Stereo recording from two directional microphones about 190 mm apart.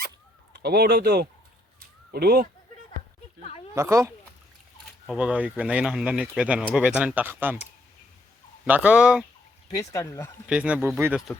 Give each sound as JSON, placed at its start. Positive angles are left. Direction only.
{"t": 0.5, "sound": "speech", "side_deg": -60}
{"t": 3.8, "sound": "speech", "side_deg": -15}
{"t": 5.0, "sound": "speech", "side_deg": -5}
{"t": 8.6, "sound": "speech", "side_deg": -10}
{"t": 9.7, "sound": "speech", "side_deg": 15}
{"t": 10.4, "sound": "speech", "side_deg": -5}